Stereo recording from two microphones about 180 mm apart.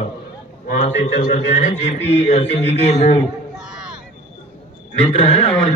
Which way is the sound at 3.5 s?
5° right (ahead or behind).